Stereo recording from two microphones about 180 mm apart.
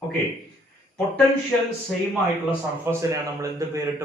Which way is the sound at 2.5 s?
15° right (ahead or behind).